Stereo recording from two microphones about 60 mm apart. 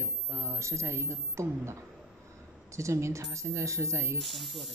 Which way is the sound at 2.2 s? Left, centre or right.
Right.